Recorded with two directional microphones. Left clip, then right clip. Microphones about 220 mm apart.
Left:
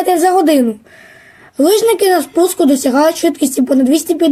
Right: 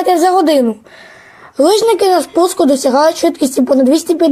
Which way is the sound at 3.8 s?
30° right (ahead or behind).